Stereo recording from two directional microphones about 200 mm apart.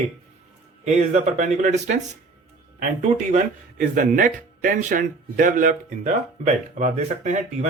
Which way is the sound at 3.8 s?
40° right (ahead or behind).